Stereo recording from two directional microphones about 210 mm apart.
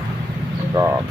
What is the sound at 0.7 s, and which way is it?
Speech, 10° right (ahead or behind).